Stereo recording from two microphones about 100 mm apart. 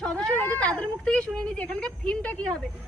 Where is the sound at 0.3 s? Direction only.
15° left (ahead or behind).